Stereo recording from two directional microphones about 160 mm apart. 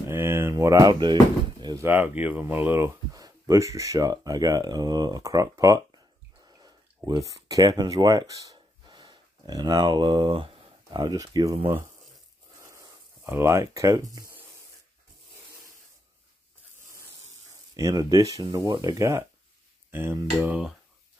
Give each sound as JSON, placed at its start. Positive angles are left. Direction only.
{"t": 0.1, "sound": "speech", "side_deg": -15}
{"t": 1.6, "sound": "a sound", "side_deg": -25}
{"t": 1.9, "sound": "speech", "side_deg": -10}
{"t": 3.1, "sound": "speech", "side_deg": -20}
{"t": 6.4, "sound": "bathtub", "side_deg": -25}
{"t": 7.1, "sound": "speech", "side_deg": -20}
{"t": 12.6, "sound": "a sound", "side_deg": -20}
{"t": 17.7, "sound": "speech", "side_deg": -20}